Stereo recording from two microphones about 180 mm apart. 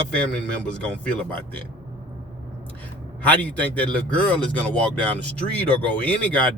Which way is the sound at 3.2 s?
10° left (ahead or behind).